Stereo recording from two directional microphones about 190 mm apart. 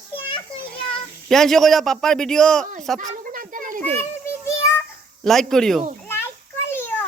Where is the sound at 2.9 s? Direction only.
45° right (ahead or behind).